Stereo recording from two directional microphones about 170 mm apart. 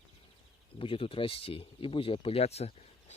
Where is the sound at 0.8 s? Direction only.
30° left (ahead or behind).